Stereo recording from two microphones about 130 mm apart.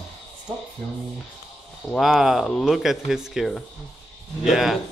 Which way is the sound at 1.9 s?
Centre (ahead or behind).